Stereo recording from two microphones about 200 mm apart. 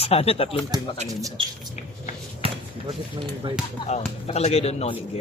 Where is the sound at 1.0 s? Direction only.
20° right (ahead or behind).